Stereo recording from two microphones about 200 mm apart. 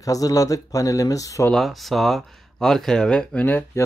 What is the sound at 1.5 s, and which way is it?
Speech, centre (ahead or behind).